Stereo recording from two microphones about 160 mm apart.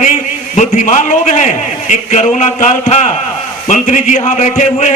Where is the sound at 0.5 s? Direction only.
50° left (ahead or behind).